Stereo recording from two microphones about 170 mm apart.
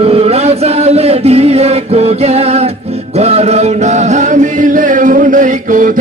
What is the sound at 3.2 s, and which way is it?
Chant, 40° right (ahead or behind).